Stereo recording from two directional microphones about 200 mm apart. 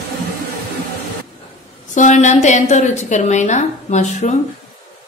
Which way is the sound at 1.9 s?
35° left (ahead or behind).